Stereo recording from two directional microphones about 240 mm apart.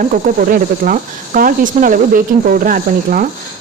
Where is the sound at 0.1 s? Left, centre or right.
Right.